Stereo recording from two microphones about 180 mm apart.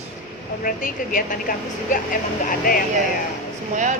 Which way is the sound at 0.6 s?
50° left (ahead or behind).